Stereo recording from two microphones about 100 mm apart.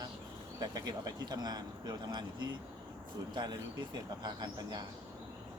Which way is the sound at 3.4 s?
45° right (ahead or behind).